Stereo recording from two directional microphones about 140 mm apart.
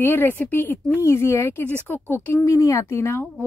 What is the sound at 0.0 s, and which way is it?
Speech, 15° left (ahead or behind).